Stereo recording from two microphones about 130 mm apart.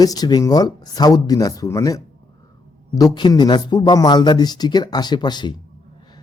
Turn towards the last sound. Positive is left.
turn(degrees=35)  # may be behind; listen again after turning